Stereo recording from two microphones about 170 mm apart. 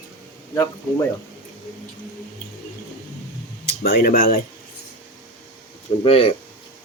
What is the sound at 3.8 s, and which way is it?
Speech, 65° left (ahead or behind).